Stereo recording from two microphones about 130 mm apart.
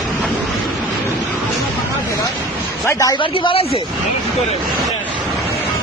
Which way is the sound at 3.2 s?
40° left (ahead or behind).